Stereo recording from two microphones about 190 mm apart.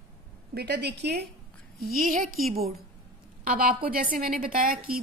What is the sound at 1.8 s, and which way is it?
Speech, 50° right (ahead or behind).